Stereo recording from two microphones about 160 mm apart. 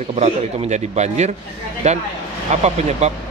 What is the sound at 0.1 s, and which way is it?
A man's voice, 45° right (ahead or behind).